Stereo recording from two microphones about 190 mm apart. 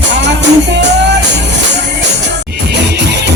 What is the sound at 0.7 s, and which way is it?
Music, 65° right (ahead or behind).